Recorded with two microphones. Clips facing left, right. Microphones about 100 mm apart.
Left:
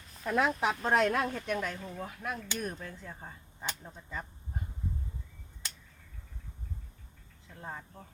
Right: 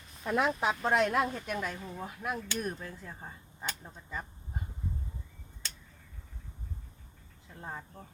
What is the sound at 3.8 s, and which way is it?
Quack, 5° right (ahead or behind).